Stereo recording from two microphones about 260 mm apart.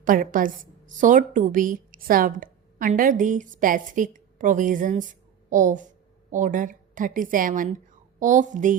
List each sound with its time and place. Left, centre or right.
0.0 s a woman's voice: right